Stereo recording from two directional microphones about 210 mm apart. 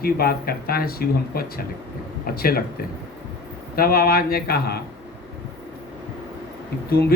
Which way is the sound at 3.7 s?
45° left (ahead or behind).